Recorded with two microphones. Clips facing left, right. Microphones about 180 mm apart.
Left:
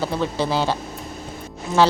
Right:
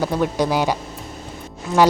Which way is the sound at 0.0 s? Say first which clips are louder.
Right 3 dB; 15° right (ahead or behind).